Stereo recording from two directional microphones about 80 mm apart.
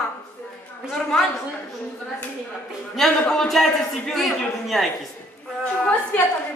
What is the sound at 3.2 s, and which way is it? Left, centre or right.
A woman's voice, centre.